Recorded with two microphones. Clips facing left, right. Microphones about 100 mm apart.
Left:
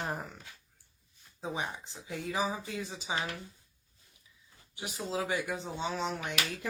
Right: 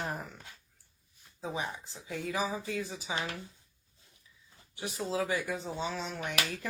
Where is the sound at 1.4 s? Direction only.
30° left (ahead or behind).